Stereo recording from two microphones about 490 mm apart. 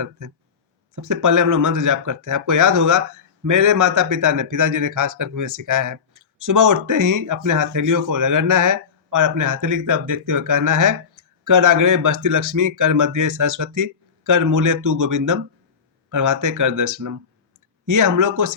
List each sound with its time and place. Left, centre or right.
0.2 s speech: right